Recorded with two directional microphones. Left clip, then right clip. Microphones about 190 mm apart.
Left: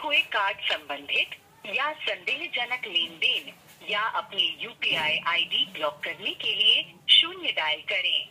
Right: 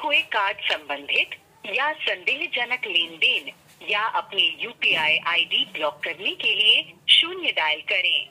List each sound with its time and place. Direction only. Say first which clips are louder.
0.0 s a woman's voice: right 3 dB; 35° right (ahead or behind)